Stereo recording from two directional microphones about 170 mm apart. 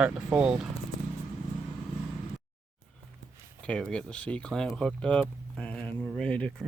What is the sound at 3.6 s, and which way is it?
Speech, 5° left (ahead or behind).